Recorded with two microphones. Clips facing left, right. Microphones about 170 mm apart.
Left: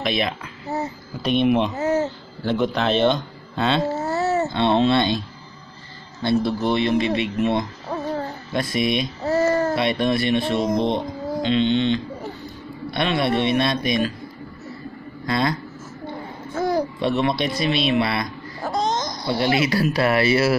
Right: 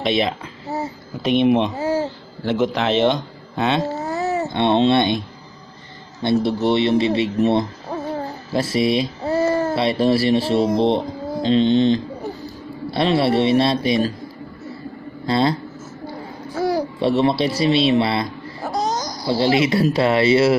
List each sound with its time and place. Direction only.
0.0 s a child's voice: 25° right (ahead or behind)
0.7 s a sound: 10° right (ahead or behind)
1.4 s speech: 25° right (ahead or behind)
1.8 s speech: 10° right (ahead or behind)
2.4 s speech: 20° right (ahead or behind)
6.2 s speech: 25° right (ahead or behind)
8.5 s a sound: 30° right (ahead or behind)
9.8 s speech: 30° right (ahead or behind)
15.2 s speech: 30° right (ahead or behind)
16.5 s babbling: 10° right (ahead or behind)
17.0 s speech: 30° right (ahead or behind)
18.6 s babbling: 5° right (ahead or behind)
19.2 s speech: 25° right (ahead or behind)